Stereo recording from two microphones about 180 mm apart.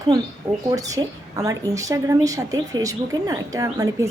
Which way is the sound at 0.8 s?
20° right (ahead or behind).